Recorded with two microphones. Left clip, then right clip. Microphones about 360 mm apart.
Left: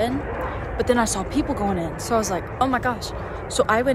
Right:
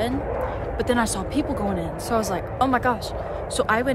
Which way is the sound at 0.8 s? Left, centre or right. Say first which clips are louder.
Left 3 dB; centre.